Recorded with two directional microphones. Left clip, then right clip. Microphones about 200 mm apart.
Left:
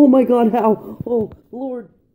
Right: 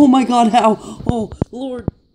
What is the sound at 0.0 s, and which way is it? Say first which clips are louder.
A man's voice: even; 55° right (ahead or behind).